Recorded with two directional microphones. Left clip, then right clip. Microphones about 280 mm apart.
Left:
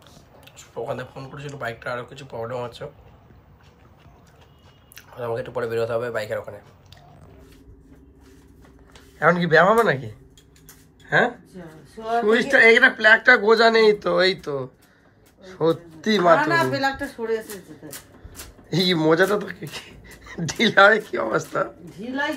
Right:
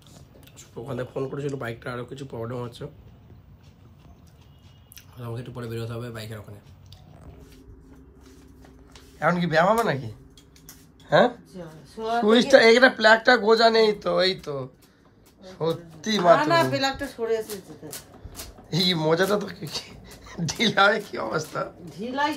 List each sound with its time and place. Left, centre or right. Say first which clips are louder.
1.2 s speech: right 2 dB; centre
4.9 s speech: left 11 dB; centre
9.2 s speech: left 5 dB; centre
18.7 s speech: left 3 dB; centre